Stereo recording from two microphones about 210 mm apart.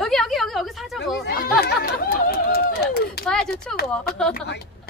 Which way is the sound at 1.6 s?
45° left (ahead or behind).